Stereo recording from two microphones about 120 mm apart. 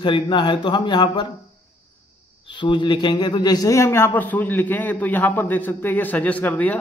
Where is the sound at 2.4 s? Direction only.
40° left (ahead or behind).